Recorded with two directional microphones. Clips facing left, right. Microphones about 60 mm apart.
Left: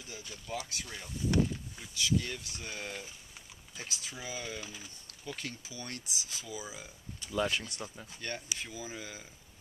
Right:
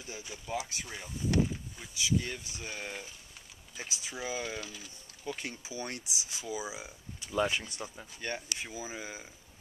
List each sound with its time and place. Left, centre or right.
0.2 s speech: centre
4.6 s speech: centre
5.0 s speech: centre